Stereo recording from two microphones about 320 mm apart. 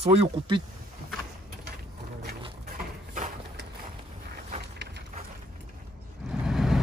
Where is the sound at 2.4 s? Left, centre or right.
Right.